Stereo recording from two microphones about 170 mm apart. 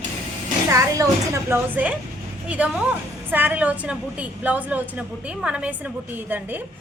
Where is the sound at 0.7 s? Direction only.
20° right (ahead or behind).